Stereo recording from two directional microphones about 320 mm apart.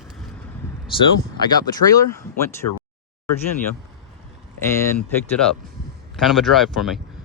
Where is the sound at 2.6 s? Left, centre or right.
Left.